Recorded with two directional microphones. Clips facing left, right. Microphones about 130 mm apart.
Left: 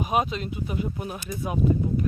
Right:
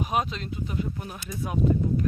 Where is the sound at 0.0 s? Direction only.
Centre (ahead or behind).